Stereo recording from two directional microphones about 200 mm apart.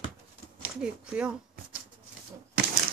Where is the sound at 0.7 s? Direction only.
5° right (ahead or behind).